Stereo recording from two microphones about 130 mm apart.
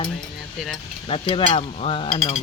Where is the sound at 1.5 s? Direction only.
45° left (ahead or behind).